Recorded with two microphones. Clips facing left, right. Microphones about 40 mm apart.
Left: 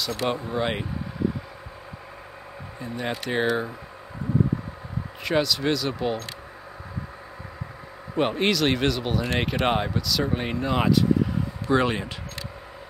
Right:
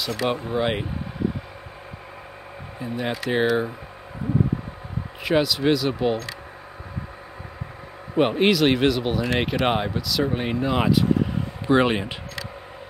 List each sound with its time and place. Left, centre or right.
0.0 s speech: centre
2.8 s speech: centre
5.2 s speech: centre
8.2 s speech: centre
11.6 s speech: right